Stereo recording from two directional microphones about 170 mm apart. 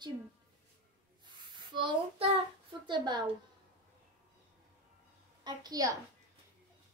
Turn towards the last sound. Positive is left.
turn(degrees=-20)  # may be behind; listen again after turning